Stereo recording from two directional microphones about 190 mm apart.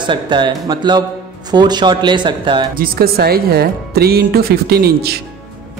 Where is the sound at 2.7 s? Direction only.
50° right (ahead or behind).